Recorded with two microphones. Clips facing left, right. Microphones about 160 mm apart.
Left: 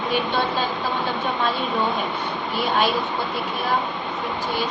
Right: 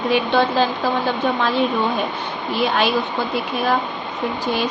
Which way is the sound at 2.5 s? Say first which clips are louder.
Right 3 dB; 90° right.